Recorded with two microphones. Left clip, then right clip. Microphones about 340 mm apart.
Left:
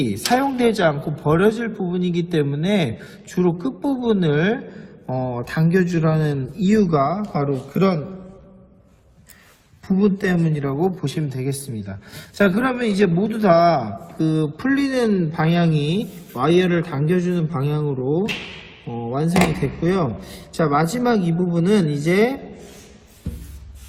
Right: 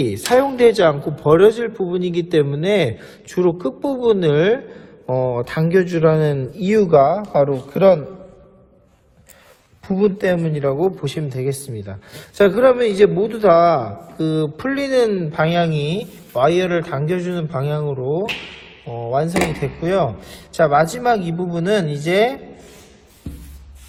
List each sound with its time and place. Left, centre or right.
0.0 s a man's voice: right
9.8 s a man's voice: right
19.1 s a man's voice: right